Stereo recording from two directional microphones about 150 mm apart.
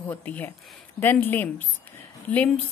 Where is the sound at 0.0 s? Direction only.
10° left (ahead or behind).